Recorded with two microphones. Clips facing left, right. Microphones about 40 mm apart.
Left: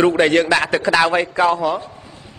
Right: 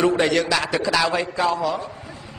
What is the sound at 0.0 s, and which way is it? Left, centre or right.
A woman's voice, left.